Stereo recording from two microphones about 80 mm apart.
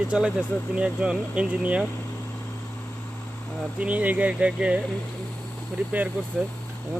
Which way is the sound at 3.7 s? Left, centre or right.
Centre.